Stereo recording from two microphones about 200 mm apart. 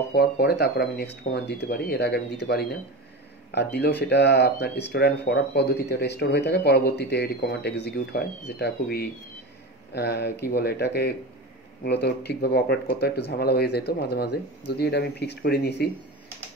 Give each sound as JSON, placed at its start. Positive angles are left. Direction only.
{"t": 0.1, "sound": "speech", "side_deg": 50}